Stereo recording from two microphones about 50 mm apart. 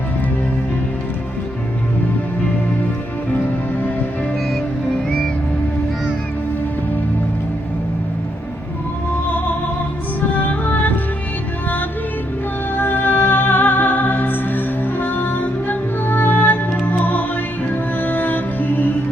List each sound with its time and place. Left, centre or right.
10.2 s music: left
12.7 s music: left